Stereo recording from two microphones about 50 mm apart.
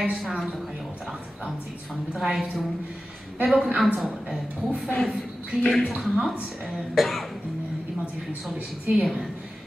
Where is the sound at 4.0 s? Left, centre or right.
Centre.